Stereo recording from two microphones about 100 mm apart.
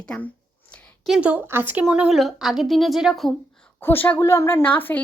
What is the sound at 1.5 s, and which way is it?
Speech, 20° right (ahead or behind).